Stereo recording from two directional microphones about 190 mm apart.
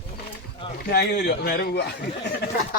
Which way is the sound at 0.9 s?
60° left (ahead or behind).